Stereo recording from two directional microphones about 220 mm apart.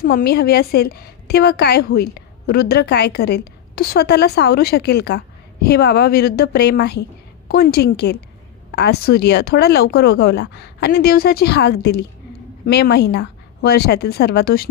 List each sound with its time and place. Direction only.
0.0 s a woman's voice: 45° left (ahead or behind)